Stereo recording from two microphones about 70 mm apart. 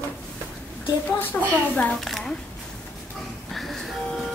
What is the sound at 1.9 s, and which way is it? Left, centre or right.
Speech, centre.